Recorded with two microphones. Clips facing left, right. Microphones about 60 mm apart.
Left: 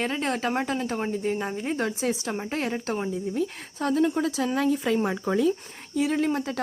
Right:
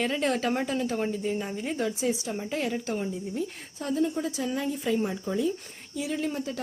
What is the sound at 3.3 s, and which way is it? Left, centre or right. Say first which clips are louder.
Speech: left 5 dB; left.